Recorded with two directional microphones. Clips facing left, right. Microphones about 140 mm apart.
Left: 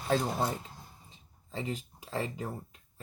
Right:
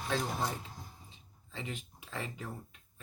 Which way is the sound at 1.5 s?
35° left (ahead or behind).